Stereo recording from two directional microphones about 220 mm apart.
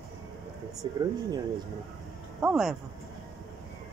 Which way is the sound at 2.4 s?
5° right (ahead or behind).